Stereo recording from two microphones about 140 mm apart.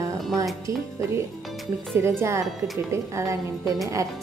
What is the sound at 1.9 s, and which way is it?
Speech, 15° right (ahead or behind).